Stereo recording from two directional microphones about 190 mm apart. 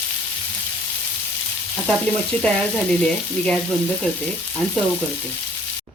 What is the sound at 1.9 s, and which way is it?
Frying, 5° left (ahead or behind).